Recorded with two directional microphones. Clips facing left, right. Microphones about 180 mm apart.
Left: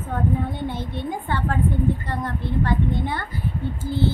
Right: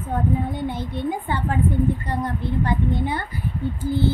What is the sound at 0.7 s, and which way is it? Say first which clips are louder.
A child's voice: right 2 dB; 15° right (ahead or behind).